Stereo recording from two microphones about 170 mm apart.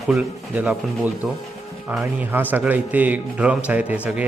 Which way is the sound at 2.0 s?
10° right (ahead or behind).